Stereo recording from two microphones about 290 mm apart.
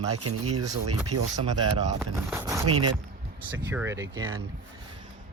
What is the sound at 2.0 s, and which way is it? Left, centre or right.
Speech, centre.